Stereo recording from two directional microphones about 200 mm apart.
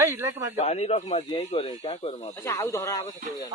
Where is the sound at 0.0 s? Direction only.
15° right (ahead or behind).